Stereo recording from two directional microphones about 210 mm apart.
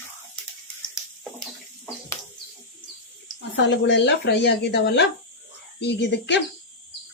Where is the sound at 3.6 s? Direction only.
55° left (ahead or behind).